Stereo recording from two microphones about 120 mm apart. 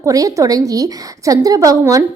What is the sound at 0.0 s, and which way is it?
A woman's voice, 30° right (ahead or behind).